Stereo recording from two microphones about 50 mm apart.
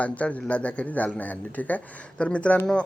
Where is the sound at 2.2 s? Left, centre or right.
Left.